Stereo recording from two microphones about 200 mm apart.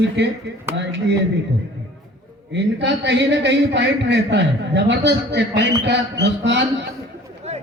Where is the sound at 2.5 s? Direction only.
60° right (ahead or behind).